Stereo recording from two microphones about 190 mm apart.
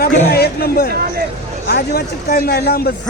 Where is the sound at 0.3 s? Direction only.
55° left (ahead or behind).